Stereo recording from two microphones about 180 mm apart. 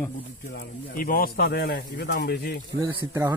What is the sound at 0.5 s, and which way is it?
Speech, 55° left (ahead or behind).